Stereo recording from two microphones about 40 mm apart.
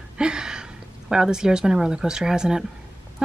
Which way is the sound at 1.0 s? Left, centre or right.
Centre.